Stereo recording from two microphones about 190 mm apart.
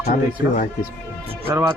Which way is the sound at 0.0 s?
50° left (ahead or behind).